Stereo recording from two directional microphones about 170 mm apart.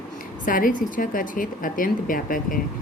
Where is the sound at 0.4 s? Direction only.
55° left (ahead or behind).